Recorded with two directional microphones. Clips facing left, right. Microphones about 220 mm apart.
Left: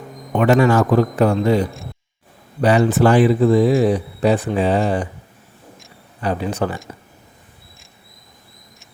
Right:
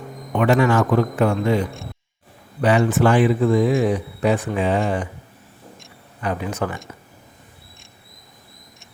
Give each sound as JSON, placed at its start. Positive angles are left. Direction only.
{"t": 0.6, "sound": "speech", "side_deg": 40}
{"t": 6.2, "sound": "speech", "side_deg": 30}